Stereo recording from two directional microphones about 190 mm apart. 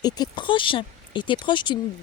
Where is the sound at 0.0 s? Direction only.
25° left (ahead or behind).